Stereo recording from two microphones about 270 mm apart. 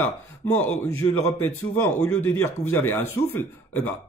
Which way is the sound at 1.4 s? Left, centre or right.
Centre.